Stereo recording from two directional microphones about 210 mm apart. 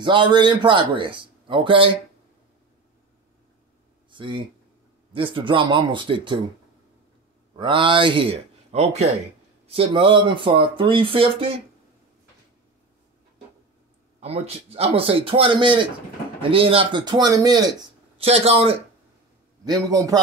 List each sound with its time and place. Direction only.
0.0 s a man's voice: 20° right (ahead or behind)
4.1 s a man's voice: 25° right (ahead or behind)
7.5 s a man's voice: 20° right (ahead or behind)
14.2 s a man's voice: 30° right (ahead or behind)
19.6 s a man's voice: 15° right (ahead or behind)